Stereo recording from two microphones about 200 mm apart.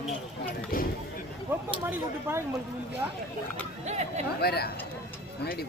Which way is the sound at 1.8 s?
10° right (ahead or behind).